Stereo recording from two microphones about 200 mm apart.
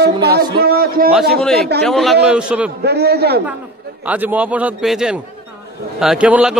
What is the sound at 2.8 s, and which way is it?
Speech, 55° right (ahead or behind).